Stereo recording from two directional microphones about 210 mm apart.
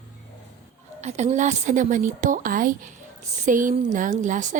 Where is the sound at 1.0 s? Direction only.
35° right (ahead or behind).